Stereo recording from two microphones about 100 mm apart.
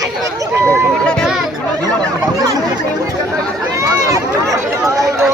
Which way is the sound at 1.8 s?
40° right (ahead or behind).